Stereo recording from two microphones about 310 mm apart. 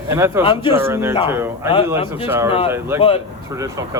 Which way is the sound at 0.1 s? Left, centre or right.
Centre.